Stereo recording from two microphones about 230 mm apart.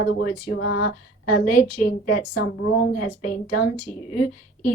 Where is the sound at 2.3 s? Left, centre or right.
Left.